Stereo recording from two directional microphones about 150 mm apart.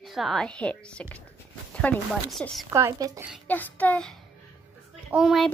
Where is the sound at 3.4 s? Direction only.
10° left (ahead or behind).